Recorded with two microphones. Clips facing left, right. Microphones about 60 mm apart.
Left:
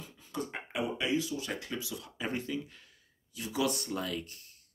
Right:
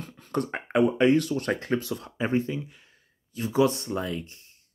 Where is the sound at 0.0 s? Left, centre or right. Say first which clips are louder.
Right 9 dB; right.